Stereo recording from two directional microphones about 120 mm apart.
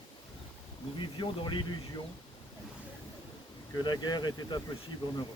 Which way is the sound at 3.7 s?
35° left (ahead or behind).